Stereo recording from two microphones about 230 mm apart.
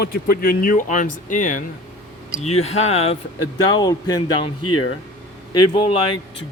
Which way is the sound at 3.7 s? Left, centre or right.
Centre.